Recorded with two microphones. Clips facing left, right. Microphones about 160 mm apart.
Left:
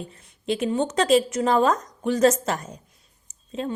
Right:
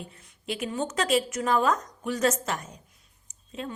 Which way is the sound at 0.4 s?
30° left (ahead or behind).